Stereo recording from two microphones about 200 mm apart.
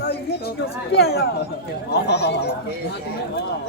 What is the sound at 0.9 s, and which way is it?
Speech, 55° left (ahead or behind).